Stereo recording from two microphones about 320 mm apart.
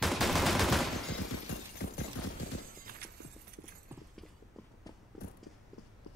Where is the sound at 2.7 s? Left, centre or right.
Right.